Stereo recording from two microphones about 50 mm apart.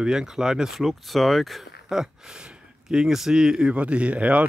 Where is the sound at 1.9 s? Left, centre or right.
Centre; by 4.5 s right.